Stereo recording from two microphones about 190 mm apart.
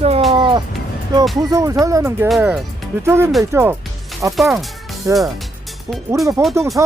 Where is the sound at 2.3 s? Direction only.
5° right (ahead or behind).